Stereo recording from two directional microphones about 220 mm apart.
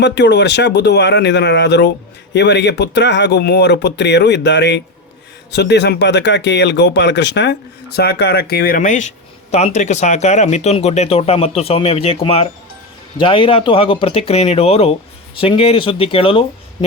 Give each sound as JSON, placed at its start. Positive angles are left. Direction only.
{"t": 0.0, "sound": "speech", "side_deg": 50}